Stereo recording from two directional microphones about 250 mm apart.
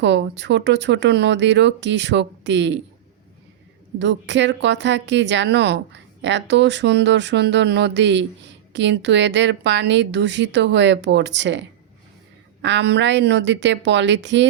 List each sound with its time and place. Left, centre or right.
0.0 s a woman's voice: right
3.9 s a woman's voice: right
12.6 s a woman's voice: right